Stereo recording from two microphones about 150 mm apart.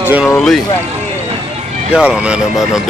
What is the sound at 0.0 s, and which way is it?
Speech, 10° right (ahead or behind).